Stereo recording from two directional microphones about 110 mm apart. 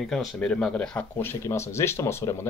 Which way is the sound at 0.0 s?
5° left (ahead or behind).